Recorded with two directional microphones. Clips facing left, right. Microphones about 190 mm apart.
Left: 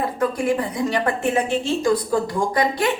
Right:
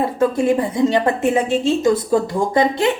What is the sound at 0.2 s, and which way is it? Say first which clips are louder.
Speech: right 5 dB; 25° right (ahead or behind).